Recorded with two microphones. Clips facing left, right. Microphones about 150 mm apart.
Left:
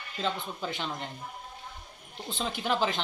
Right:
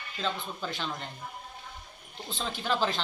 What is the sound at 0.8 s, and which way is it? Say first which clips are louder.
Speech: left 1 dB; 15° left (ahead or behind).